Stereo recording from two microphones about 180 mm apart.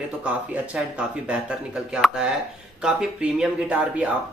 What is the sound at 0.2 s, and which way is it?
Speech, 5° right (ahead or behind).